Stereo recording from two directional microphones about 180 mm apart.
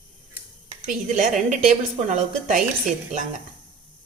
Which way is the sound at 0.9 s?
45° right (ahead or behind).